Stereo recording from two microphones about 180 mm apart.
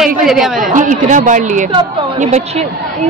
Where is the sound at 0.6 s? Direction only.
45° right (ahead or behind).